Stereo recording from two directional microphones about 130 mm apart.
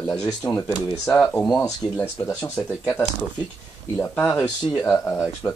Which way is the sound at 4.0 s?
10° left (ahead or behind).